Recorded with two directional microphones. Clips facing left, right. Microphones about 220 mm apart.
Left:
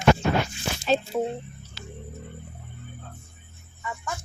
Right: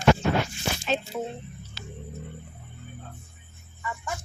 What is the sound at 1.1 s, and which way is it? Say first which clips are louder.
Speech: left 5 dB; 25° left (ahead or behind).